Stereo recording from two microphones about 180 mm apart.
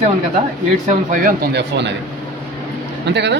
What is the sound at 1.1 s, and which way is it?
Speech, 50° right (ahead or behind).